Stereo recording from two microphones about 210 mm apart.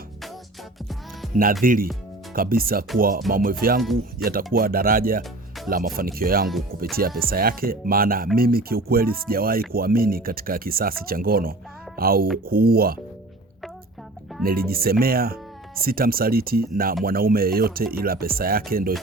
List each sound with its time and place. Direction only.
1.2 s music: centre (ahead or behind)
1.6 s speech: 40° right (ahead or behind)
14.4 s speech: 45° right (ahead or behind)